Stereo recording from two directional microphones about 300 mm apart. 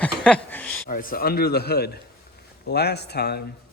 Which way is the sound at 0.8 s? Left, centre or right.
Left.